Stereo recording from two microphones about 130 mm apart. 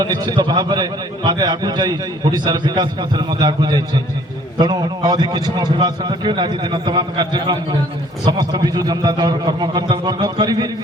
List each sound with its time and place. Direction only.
0.0 s a man's voice: 30° right (ahead or behind)